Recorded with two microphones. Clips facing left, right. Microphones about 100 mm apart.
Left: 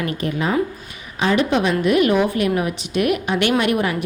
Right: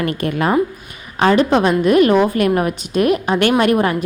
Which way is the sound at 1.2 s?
45° right (ahead or behind).